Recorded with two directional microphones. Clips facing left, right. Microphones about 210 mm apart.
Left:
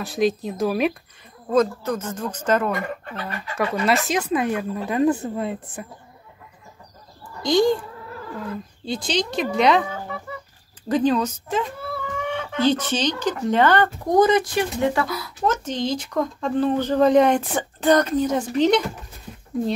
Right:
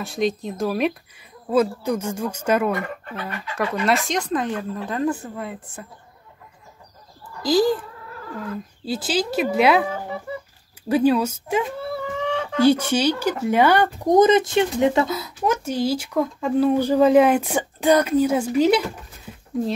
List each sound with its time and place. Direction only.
0.0 s a woman's voice: centre (ahead or behind)
1.5 s speech: 10° right (ahead or behind)
3.5 s speech: centre (ahead or behind); by 5.6 s 25° left (ahead or behind)
7.4 s a woman's voice: 5° right (ahead or behind)
8.8 s a woman's voice: 5° right (ahead or behind)
9.8 s speech: 30° right (ahead or behind)
10.9 s speech: 10° right (ahead or behind)
12.3 s a sound: 35° right (ahead or behind)
12.5 s speech: 10° right (ahead or behind)
15.4 s speech: 10° right (ahead or behind)